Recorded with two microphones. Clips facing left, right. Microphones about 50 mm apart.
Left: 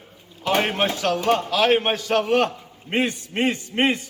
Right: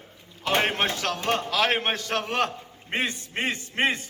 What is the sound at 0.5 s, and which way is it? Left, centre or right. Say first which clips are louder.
Speech: left 3 dB; right.